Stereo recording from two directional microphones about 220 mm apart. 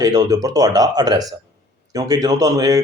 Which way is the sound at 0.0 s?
15° right (ahead or behind).